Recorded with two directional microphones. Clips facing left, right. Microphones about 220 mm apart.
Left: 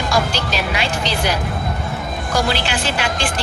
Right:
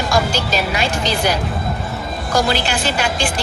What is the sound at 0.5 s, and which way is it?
Speech, 45° right (ahead or behind).